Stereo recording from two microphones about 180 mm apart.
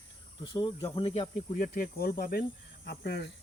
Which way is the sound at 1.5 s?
50° left (ahead or behind).